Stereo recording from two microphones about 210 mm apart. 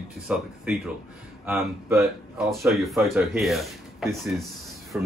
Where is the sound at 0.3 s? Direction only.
5° right (ahead or behind).